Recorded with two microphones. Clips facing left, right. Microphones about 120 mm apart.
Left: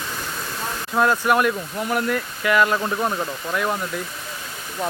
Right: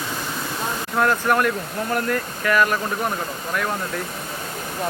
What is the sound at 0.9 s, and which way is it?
Speech, 15° left (ahead or behind).